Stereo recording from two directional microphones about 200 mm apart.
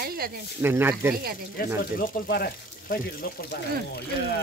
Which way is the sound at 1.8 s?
50° left (ahead or behind).